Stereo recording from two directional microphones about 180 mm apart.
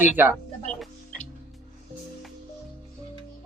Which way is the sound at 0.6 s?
5° left (ahead or behind).